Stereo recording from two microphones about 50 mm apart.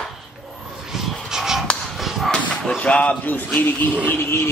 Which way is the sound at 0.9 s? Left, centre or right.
Centre.